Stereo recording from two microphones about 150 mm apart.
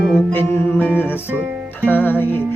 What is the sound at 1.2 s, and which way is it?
Speech, 10° right (ahead or behind).